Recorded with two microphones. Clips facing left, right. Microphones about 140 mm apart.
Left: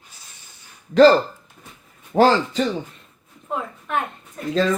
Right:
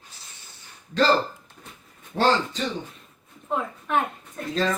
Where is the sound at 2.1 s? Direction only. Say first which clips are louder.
Left 7 dB; 70° left (ahead or behind).